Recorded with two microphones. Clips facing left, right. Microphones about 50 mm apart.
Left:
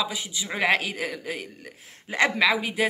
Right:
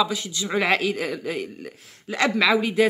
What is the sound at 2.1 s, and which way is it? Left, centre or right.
Speech, left.